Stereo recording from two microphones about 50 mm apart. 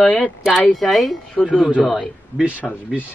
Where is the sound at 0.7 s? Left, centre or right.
Centre.